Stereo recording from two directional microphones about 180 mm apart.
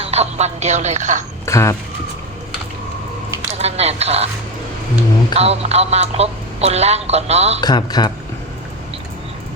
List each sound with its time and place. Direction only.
0.0 s speech: 35° right (ahead or behind)
1.5 s speech: 15° left (ahead or behind)
3.6 s speech: 35° right (ahead or behind)
5.3 s speech: 35° right (ahead or behind)
7.6 s speech: 20° left (ahead or behind)